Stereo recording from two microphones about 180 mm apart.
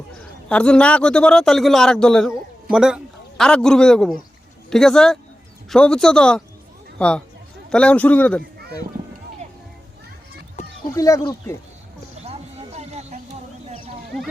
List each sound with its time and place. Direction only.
0.4 s a man's voice: 5° left (ahead or behind)
10.9 s a man's voice: 15° left (ahead or behind)
12.2 s a sound: 35° right (ahead or behind)